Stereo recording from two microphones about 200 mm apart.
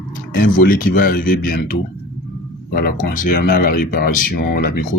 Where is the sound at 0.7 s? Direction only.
45° left (ahead or behind).